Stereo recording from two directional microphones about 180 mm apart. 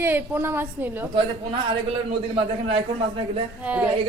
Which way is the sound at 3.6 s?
5° right (ahead or behind).